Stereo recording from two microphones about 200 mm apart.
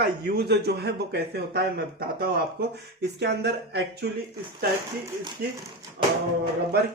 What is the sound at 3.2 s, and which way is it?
Speech, 55° right (ahead or behind).